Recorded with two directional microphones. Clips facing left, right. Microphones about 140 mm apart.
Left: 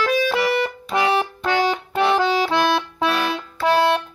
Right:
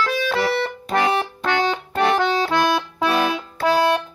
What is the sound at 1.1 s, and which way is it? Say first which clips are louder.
Music: left 1 dB; 10° left (ahead or behind).